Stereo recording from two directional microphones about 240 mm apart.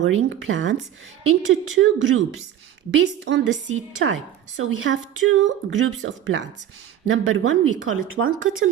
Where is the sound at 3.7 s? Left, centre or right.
Right.